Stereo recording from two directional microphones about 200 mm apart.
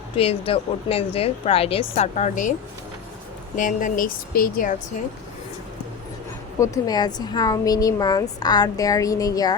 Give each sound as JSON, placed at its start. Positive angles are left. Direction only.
{"t": 0.2, "sound": "a woman's voice", "side_deg": 30}
{"t": 6.6, "sound": "a woman's voice", "side_deg": 20}